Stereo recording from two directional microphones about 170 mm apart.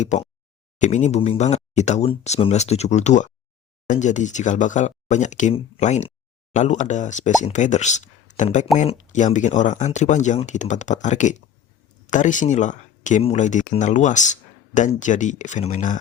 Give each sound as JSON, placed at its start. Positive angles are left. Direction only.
{"t": 0.8, "sound": "speech", "side_deg": 45}